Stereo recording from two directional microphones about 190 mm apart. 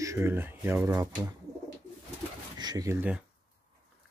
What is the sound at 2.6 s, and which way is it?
Speech, 20° right (ahead or behind).